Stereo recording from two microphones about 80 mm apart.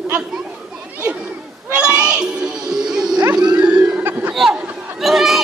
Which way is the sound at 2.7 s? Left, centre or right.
Centre.